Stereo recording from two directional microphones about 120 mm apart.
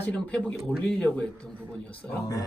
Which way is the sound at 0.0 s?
10° left (ahead or behind).